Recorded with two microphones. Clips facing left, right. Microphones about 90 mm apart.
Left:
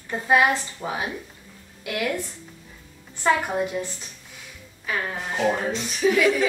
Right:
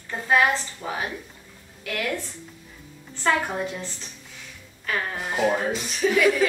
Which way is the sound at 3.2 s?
15° left (ahead or behind).